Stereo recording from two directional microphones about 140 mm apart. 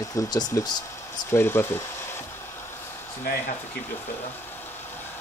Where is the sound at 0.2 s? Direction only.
25° left (ahead or behind).